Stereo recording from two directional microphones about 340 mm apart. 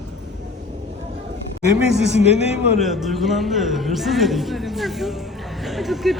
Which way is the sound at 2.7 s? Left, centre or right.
Centre.